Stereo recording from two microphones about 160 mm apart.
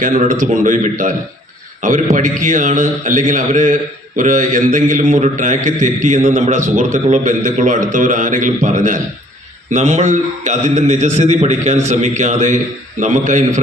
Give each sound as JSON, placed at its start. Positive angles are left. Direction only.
{"t": 0.0, "sound": "a man's voice", "side_deg": -55}